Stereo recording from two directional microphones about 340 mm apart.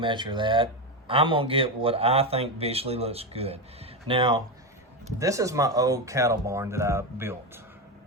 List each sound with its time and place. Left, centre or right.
0.0 s speech: centre